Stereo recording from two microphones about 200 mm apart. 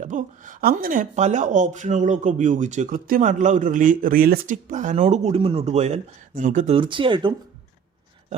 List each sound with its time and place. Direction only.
0.0 s speech: 40° right (ahead or behind)
6.7 s speech: 25° right (ahead or behind)